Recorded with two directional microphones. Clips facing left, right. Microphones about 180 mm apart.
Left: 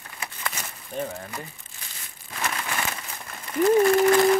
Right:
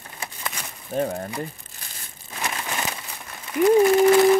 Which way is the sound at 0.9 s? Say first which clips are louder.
Right 6 dB; 40° right (ahead or behind).